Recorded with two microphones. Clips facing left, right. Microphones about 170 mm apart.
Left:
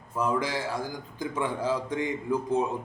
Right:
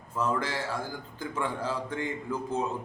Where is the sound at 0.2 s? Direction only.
15° left (ahead or behind).